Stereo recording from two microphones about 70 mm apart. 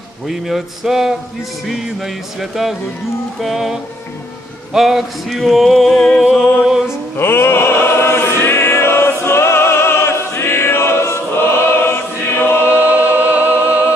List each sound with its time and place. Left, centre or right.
0.3 s a sound: centre
7.2 s choir: left
12.7 s music: right